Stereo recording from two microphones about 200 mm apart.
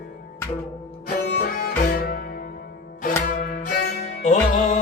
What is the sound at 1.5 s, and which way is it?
Music, 45° left (ahead or behind).